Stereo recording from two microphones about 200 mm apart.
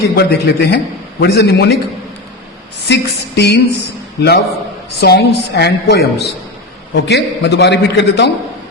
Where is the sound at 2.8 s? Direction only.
55° left (ahead or behind).